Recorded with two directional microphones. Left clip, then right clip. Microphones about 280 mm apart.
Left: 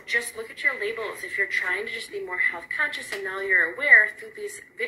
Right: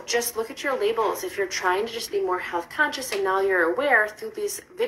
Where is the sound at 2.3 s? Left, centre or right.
Centre.